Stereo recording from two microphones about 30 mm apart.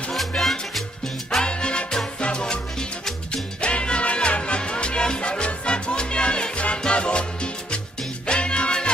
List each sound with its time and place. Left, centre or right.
0.4 s music: centre
1.4 s music: left
3.6 s music: left
8.3 s music: left